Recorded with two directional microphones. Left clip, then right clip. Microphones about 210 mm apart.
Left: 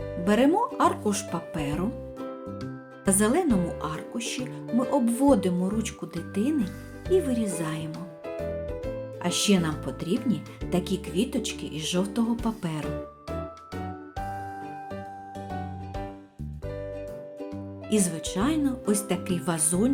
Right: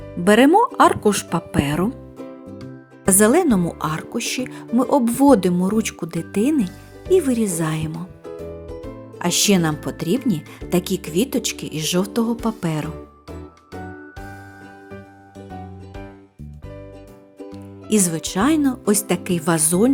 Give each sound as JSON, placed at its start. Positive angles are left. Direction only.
{"t": 0.3, "sound": "speech", "side_deg": -45}
{"t": 3.1, "sound": "speech", "side_deg": -45}
{"t": 9.1, "sound": "speech", "side_deg": -45}
{"t": 17.8, "sound": "speech", "side_deg": -45}